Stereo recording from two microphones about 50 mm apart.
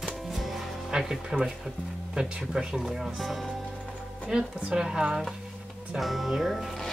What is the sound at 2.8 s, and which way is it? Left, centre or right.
Speech, centre.